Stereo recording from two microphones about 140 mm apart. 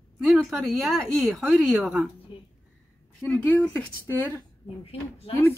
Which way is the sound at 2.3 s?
35° left (ahead or behind).